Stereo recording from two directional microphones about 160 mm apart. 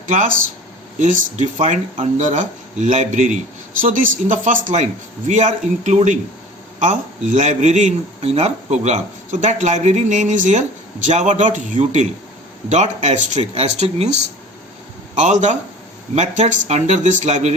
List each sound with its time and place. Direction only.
0.1 s a man's voice: 55° right (ahead or behind)